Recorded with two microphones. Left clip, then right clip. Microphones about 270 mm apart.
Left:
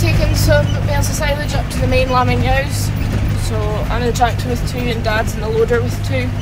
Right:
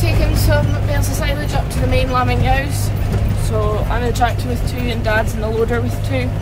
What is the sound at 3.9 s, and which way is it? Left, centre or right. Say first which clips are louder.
Speech: left 2 dB; centre.